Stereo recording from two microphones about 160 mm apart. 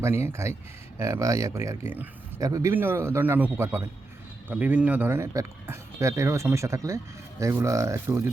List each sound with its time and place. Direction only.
0.0 s speech: 15° right (ahead or behind)